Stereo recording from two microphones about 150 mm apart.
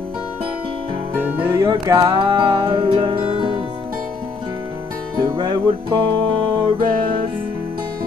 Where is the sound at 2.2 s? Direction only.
30° right (ahead or behind).